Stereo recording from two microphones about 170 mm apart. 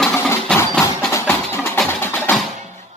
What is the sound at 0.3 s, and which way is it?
Percussion, 15° left (ahead or behind).